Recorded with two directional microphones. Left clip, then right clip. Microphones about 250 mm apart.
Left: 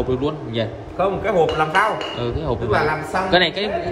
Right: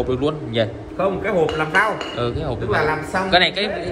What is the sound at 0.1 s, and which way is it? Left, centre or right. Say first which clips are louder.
A man's voice: right 1 dB; centre.